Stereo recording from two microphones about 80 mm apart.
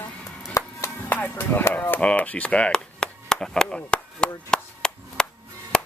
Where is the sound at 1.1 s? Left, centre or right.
Centre.